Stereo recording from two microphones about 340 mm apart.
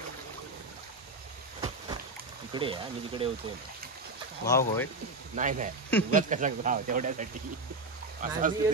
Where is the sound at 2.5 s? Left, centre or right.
Centre.